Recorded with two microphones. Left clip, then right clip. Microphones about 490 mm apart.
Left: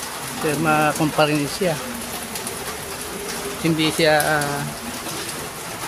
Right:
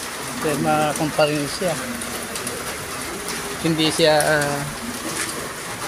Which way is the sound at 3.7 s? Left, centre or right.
Left.